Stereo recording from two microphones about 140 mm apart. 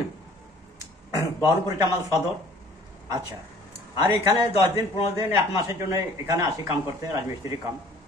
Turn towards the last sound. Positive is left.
turn(degrees=-20)  # may be behind; listen again after turning